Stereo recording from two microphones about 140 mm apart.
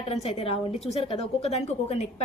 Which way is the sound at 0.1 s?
45° left (ahead or behind).